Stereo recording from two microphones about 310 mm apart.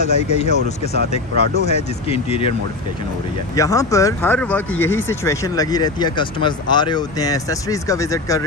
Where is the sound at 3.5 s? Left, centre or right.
Centre.